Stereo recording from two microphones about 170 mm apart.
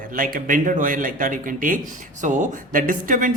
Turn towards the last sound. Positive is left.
turn(degrees=-50)  # may be behind; listen again after turning